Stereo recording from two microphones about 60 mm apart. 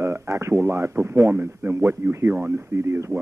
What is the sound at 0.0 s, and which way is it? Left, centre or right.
A man's voice, right.